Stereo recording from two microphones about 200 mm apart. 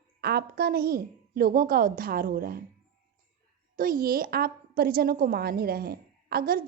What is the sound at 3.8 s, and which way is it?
A woman's voice, 45° right (ahead or behind).